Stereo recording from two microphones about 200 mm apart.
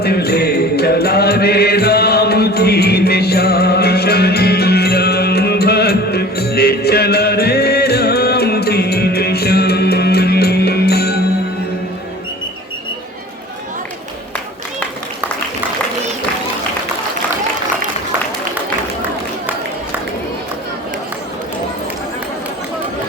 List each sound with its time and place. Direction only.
0.0 s music: 50° left (ahead or behind)